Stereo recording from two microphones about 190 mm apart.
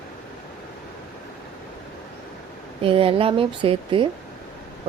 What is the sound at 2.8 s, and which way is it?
Speech, 30° right (ahead or behind).